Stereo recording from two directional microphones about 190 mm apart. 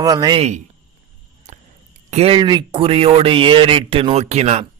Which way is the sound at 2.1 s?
30° right (ahead or behind).